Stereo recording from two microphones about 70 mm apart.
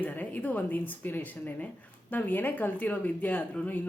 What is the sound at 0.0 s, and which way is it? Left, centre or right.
A woman's voice, left.